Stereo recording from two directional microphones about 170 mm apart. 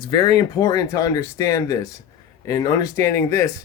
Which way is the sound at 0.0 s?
25° left (ahead or behind).